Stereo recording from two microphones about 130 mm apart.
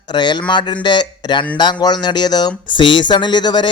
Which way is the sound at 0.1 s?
35° left (ahead or behind).